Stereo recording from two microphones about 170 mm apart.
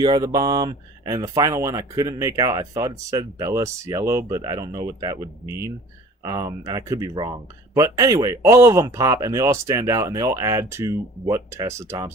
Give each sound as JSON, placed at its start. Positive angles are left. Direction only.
{"t": 0.0, "sound": "speech", "side_deg": -25}